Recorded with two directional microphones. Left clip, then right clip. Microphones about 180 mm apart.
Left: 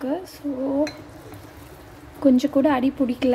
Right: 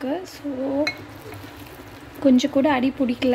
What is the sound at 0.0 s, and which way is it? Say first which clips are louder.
Speech: even; 5° left (ahead or behind).